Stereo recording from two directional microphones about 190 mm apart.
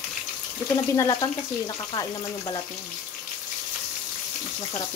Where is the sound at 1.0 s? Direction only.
20° left (ahead or behind).